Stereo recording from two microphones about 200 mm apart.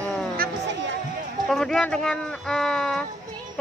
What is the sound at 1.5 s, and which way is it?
Speech, 5° left (ahead or behind).